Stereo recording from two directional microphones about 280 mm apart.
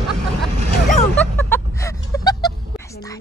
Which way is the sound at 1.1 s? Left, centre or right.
Centre.